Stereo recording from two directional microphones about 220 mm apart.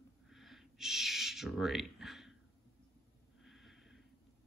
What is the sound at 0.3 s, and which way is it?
Owl, centre (ahead or behind).